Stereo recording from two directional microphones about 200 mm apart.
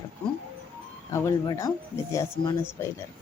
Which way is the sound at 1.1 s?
15° left (ahead or behind).